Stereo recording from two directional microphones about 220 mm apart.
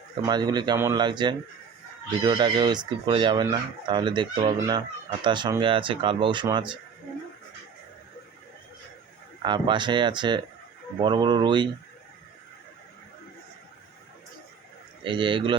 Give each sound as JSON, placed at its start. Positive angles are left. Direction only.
{"t": 0.2, "sound": "speech", "side_deg": -20}
{"t": 9.4, "sound": "speech", "side_deg": -20}
{"t": 15.0, "sound": "speech", "side_deg": -20}